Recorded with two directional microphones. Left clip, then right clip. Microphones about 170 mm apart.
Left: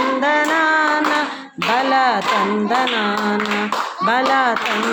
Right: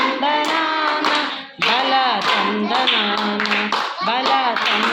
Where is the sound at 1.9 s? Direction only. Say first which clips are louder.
Left 2 dB; 40° left (ahead or behind).